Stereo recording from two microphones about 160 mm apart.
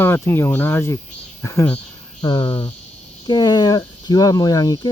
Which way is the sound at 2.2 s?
30° left (ahead or behind).